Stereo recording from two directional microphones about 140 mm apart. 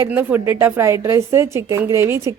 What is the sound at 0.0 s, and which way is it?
A woman's voice, 15° right (ahead or behind).